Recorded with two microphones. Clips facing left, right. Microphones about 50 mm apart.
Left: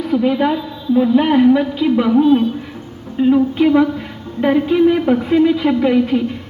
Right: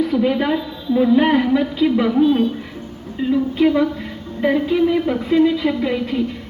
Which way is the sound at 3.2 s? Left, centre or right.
Left.